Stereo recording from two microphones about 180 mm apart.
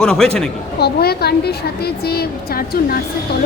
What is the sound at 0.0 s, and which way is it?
Speech, 5° left (ahead or behind).